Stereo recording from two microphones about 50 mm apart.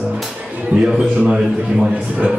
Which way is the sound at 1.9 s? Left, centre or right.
Right.